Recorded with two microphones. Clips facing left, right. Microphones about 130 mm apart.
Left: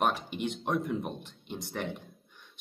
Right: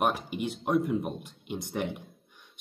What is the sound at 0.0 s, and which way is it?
Speech, 5° right (ahead or behind).